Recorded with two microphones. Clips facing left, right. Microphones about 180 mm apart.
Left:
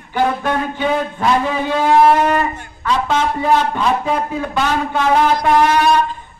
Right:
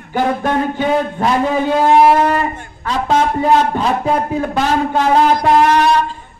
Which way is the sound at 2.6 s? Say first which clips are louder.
Left 1 dB; 40° right (ahead or behind).